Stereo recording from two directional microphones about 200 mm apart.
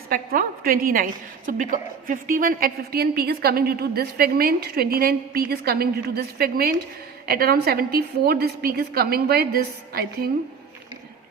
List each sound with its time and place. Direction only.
0.1 s a woman's voice: 45° right (ahead or behind)